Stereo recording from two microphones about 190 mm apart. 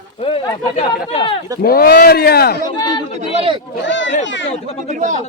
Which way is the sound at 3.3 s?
30° right (ahead or behind).